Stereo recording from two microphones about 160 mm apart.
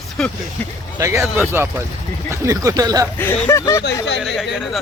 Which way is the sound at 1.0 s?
15° right (ahead or behind).